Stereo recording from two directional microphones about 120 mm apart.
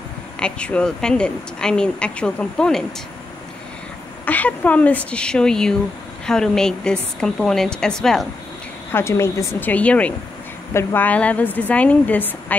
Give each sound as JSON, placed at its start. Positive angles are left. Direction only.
{"t": 0.4, "sound": "speech", "side_deg": 10}
{"t": 4.3, "sound": "a woman's voice", "side_deg": 15}
{"t": 8.9, "sound": "speech", "side_deg": 20}
{"t": 10.7, "sound": "speech", "side_deg": 20}